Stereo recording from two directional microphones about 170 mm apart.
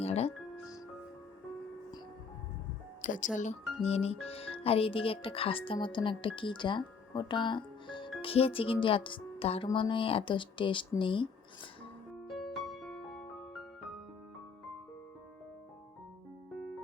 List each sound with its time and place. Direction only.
0.0 s music: 35° left (ahead or behind)
3.0 s speech: 50° left (ahead or behind); by 11.3 s 30° left (ahead or behind)
12.3 s music: centre (ahead or behind)